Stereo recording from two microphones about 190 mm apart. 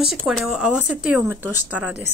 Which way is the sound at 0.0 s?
Centre (ahead or behind).